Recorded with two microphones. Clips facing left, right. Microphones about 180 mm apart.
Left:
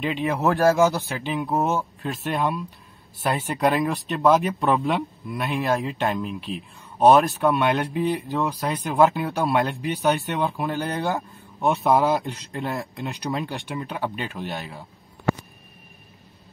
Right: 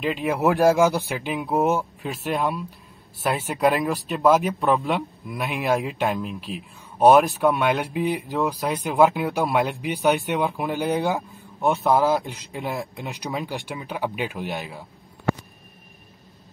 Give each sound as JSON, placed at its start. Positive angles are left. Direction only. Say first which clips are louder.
{"t": 0.0, "sound": "speech", "louder": "right 1 dB", "side_deg": 0}
{"t": 0.4, "sound": "speech", "louder": "right 1 dB", "side_deg": -15}
{"t": 2.0, "sound": "speech", "louder": "even", "side_deg": 0}
{"t": 5.3, "sound": "speech", "louder": "even", "side_deg": -15}
{"t": 11.1, "sound": "speech", "louder": "even", "side_deg": 0}
{"t": 13.0, "sound": "speech", "louder": "left 2 dB", "side_deg": -15}
{"t": 13.3, "sound": "speech", "louder": "even", "side_deg": -5}